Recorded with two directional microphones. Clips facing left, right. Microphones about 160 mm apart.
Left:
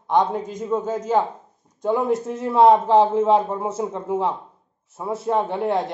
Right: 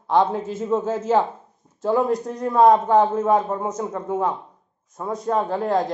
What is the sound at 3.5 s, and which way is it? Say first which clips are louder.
Speech: even; 10° left (ahead or behind).